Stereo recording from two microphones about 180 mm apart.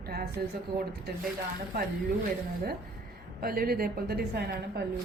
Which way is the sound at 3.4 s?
55° right (ahead or behind).